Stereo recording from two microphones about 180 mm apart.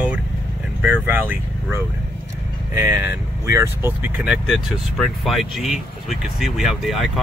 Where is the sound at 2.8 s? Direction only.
10° right (ahead or behind).